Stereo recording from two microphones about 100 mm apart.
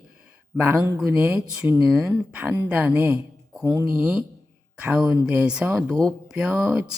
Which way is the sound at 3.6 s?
30° right (ahead or behind).